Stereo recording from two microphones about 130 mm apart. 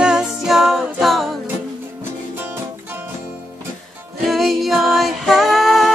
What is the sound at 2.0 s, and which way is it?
Music, 15° right (ahead or behind).